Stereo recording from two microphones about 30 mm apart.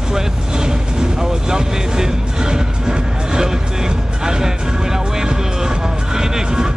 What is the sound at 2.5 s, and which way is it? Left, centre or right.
Music, right.